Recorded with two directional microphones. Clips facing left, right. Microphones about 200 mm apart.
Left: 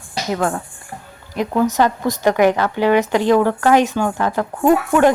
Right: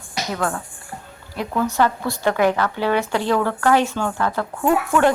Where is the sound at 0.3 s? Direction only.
25° left (ahead or behind).